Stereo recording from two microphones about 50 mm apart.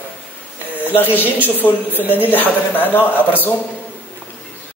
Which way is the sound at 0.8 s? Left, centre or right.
Left.